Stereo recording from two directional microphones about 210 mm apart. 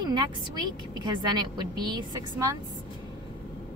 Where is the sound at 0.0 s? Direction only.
20° right (ahead or behind).